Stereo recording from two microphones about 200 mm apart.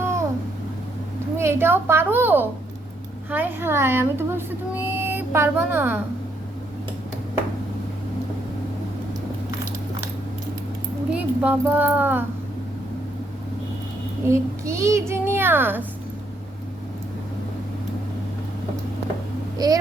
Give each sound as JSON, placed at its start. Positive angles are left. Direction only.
{"t": 0.0, "sound": "babbling", "side_deg": -15}
{"t": 1.4, "sound": "speech", "side_deg": -10}
{"t": 11.4, "sound": "speech", "side_deg": -10}
{"t": 14.3, "sound": "speech", "side_deg": -15}
{"t": 19.5, "sound": "speech", "side_deg": -20}